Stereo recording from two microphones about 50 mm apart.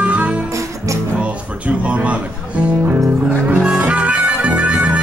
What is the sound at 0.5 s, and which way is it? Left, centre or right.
Music, right.